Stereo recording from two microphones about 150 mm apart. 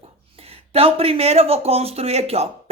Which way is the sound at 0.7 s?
40° right (ahead or behind).